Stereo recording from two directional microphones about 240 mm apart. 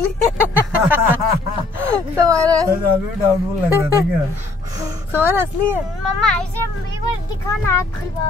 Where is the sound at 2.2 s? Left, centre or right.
Centre.